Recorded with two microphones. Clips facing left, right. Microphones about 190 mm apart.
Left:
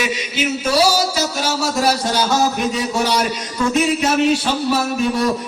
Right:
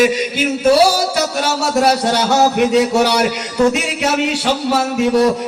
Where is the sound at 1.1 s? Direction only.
65° right (ahead or behind).